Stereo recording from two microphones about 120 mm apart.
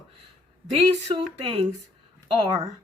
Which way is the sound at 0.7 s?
50° right (ahead or behind).